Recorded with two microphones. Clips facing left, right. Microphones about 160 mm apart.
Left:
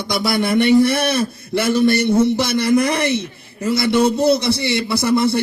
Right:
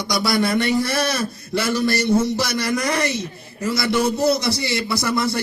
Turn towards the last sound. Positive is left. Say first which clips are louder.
# left 5 dB
turn(degrees=25)  # may be behind; listen again after turning